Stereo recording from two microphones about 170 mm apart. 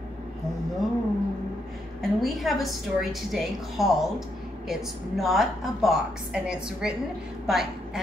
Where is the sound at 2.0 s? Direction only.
Centre (ahead or behind).